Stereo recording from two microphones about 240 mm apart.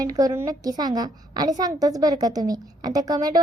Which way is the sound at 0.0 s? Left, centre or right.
Centre.